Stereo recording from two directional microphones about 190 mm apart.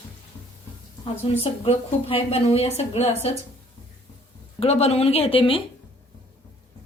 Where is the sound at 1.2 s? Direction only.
30° left (ahead or behind).